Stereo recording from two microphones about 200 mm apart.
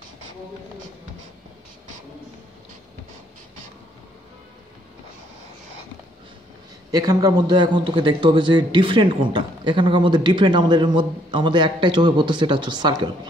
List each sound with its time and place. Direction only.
6.9 s a man's voice: 20° right (ahead or behind)